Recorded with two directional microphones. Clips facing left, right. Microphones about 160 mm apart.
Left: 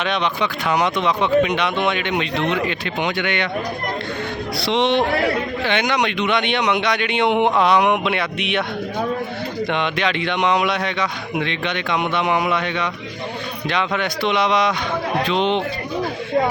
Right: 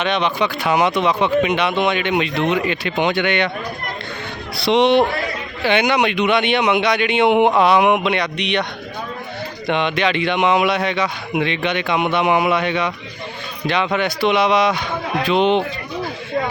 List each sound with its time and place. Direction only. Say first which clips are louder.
0.0 s a man's voice: right 2 dB; centre (ahead or behind)
3.0 s speech: right 4 dB; 25° right (ahead or behind)
4.5 s a man's voice: right 5 dB; 20° right (ahead or behind); by 8.6 s 5° left (ahead or behind)
9.6 s a man's voice: right 4 dB; centre (ahead or behind)